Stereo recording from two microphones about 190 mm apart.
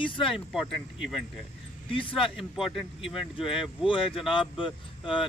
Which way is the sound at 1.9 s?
25° left (ahead or behind).